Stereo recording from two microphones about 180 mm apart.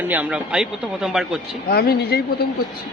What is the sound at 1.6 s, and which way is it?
Speech, 60° left (ahead or behind).